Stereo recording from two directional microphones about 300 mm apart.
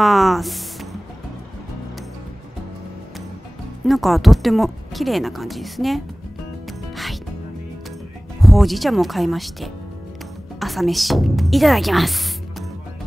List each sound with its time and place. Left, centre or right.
0.0 s speech: centre
3.8 s speech: centre
8.4 s a woman's voice: centre